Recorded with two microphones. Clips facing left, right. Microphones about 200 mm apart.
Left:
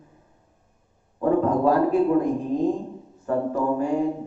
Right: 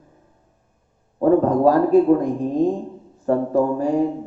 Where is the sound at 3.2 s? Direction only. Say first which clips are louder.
Right 5 dB; 35° right (ahead or behind).